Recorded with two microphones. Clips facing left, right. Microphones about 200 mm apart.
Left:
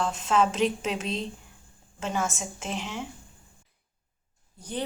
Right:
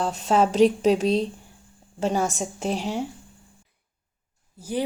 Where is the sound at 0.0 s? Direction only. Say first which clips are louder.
Right 3 dB; 35° right (ahead or behind).